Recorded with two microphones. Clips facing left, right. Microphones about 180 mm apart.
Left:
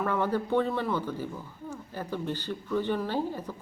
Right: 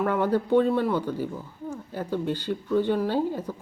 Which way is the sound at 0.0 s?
15° right (ahead or behind).